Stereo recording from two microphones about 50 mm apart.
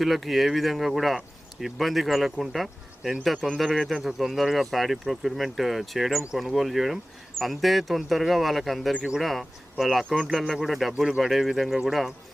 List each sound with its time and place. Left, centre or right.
0.0 s speech: centre
3.3 s speech: centre
3.6 s speech: centre